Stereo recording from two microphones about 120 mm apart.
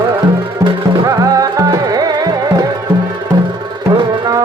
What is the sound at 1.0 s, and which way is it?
Music, 30° right (ahead or behind).